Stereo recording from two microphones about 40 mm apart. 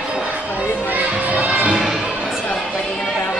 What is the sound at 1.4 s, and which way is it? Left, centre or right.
Music, right.